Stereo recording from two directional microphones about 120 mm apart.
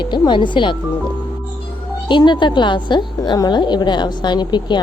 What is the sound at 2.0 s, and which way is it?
A woman's voice, 40° left (ahead or behind).